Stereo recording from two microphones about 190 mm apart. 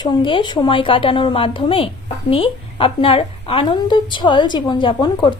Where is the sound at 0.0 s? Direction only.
25° left (ahead or behind).